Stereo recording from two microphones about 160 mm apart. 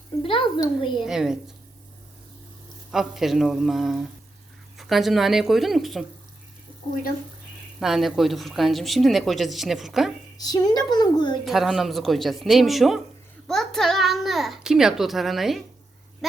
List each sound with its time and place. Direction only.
0.2 s speech: 35° left (ahead or behind)
0.9 s speech: 5° right (ahead or behind)
2.9 s speech: centre (ahead or behind)
7.8 s speech: centre (ahead or behind)
10.3 s a woman's voice: 25° left (ahead or behind)
11.4 s a child's voice: centre (ahead or behind)